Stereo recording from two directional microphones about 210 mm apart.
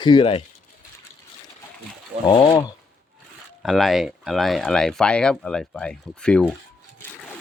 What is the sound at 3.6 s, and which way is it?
Speech, centre (ahead or behind).